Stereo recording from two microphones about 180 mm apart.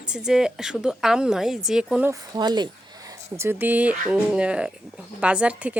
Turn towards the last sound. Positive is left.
turn(degrees=-5)  # may be behind; listen again after turning